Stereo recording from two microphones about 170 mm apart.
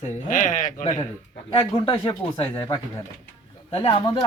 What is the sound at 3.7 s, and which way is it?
Speech, 35° left (ahead or behind).